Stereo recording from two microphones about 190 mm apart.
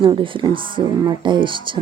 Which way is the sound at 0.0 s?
25° right (ahead or behind).